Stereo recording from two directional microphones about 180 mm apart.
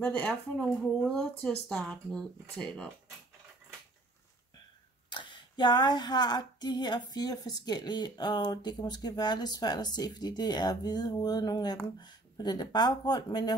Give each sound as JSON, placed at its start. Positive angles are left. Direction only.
{"t": 0.0, "sound": "speech", "side_deg": 10}
{"t": 5.1, "sound": "speech", "side_deg": 25}